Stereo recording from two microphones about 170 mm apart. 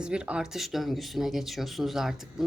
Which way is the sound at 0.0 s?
5° right (ahead or behind).